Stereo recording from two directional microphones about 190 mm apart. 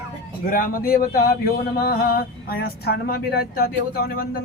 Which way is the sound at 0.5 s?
50° left (ahead or behind).